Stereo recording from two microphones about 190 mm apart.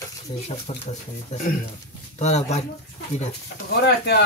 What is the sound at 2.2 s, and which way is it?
Speech, 35° left (ahead or behind).